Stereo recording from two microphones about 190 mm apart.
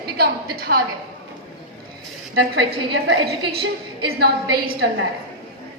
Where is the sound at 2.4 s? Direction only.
65° right (ahead or behind).